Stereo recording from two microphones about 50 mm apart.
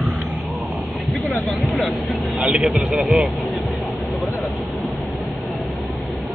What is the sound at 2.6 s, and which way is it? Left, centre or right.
Speech, centre.